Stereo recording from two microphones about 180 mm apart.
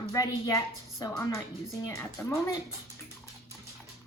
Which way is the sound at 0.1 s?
20° left (ahead or behind).